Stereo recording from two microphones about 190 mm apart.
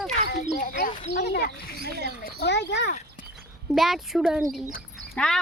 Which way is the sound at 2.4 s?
65° left (ahead or behind).